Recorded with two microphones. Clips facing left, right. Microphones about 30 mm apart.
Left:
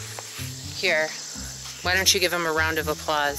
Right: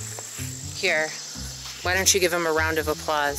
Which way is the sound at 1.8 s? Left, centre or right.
Left.